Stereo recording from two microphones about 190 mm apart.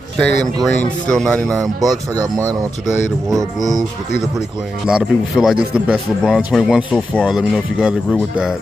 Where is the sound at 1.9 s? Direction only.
20° right (ahead or behind).